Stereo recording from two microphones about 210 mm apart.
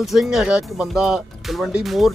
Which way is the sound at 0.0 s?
Centre (ahead or behind).